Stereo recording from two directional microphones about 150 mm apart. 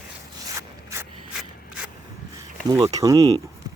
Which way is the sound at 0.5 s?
20° right (ahead or behind).